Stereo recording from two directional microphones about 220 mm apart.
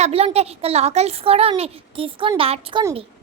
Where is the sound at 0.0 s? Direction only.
30° right (ahead or behind).